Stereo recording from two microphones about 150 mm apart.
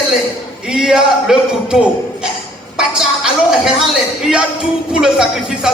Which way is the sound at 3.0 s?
5° right (ahead or behind).